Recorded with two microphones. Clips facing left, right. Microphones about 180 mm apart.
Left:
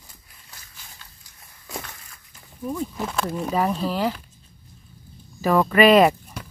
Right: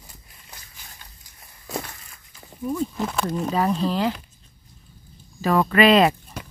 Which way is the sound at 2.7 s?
5° left (ahead or behind).